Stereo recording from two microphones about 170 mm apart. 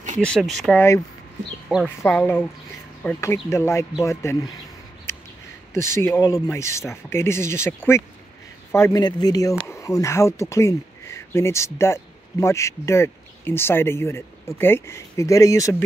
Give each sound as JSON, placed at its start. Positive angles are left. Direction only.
{"t": 0.2, "sound": "speech", "side_deg": 5}
{"t": 5.7, "sound": "speech", "side_deg": 15}